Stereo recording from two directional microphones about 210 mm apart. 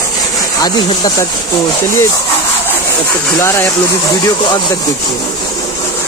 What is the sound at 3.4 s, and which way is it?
Speech, 15° left (ahead or behind).